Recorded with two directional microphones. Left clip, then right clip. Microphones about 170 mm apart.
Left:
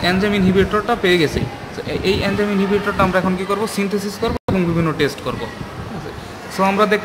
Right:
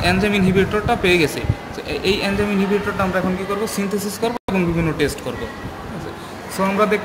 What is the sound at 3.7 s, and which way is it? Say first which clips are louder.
A man's voice: left 2 dB; 25° left (ahead or behind).